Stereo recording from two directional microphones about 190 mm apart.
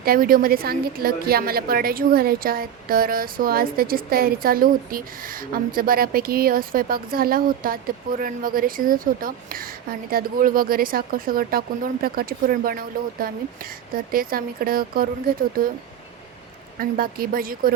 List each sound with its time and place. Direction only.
0.0 s a woman's voice: 50° right (ahead or behind)
16.7 s a woman's voice: 50° right (ahead or behind)